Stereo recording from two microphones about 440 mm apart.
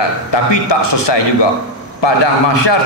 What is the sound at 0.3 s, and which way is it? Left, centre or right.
A man's voice, left.